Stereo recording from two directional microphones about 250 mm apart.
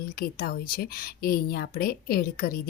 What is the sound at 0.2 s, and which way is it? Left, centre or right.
Speech, left.